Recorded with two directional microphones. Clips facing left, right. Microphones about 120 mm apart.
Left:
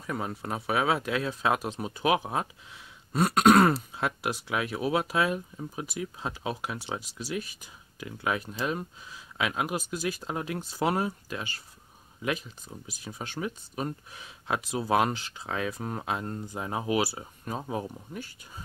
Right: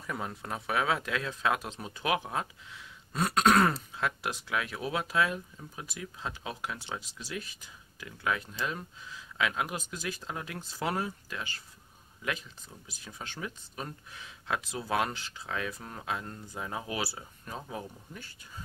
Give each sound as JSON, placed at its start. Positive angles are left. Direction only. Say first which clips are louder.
{"t": 0.0, "sound": "speech", "louder": "left 4 dB", "side_deg": 5}
{"t": 3.1, "sound": "speech", "louder": "left 5 dB", "side_deg": 10}
{"t": 15.4, "sound": "speech", "louder": "left 5 dB", "side_deg": 30}
{"t": 16.9, "sound": "speech", "louder": "left 8 dB", "side_deg": 15}